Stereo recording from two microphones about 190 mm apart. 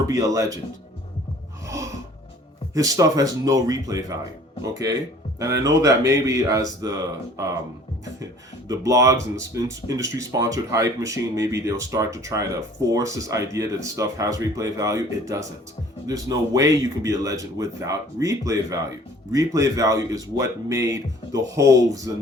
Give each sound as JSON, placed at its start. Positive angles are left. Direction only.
{"t": 0.1, "sound": "speech", "side_deg": -15}
{"t": 1.6, "sound": "a sound", "side_deg": -15}
{"t": 2.7, "sound": "speech", "side_deg": -20}
{"t": 8.6, "sound": "speech", "side_deg": -15}